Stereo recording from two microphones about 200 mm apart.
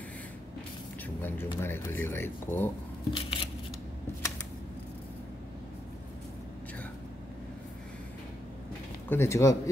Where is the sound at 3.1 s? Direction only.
25° left (ahead or behind).